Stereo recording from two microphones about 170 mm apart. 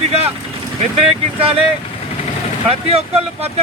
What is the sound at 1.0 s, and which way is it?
Speech, 35° right (ahead or behind).